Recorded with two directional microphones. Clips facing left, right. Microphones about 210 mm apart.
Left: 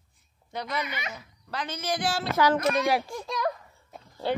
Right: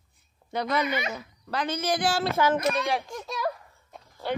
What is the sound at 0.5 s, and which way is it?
Speech, 65° right (ahead or behind).